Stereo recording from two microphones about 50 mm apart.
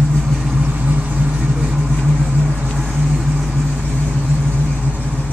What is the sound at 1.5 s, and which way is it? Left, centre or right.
Vehicle, centre.